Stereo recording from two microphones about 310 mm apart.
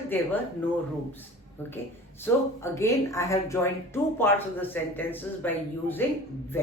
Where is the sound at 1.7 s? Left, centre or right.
Centre.